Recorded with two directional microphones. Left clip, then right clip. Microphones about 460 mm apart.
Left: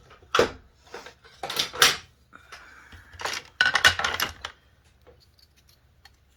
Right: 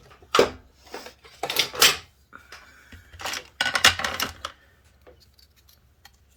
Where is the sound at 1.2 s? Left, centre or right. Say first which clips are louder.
Right 4 dB; right.